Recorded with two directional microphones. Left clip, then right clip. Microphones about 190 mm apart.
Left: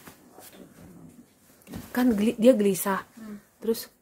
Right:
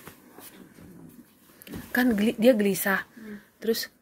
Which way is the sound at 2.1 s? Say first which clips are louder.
Left 2 dB; 15° left (ahead or behind).